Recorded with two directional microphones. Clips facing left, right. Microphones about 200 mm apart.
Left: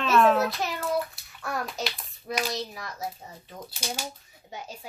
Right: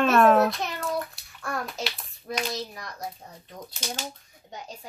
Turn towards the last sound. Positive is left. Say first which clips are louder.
# left 1 dB
turn(degrees=5)  # may be behind; listen again after turning